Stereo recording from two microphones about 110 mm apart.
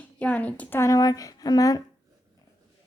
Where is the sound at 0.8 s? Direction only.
35° left (ahead or behind).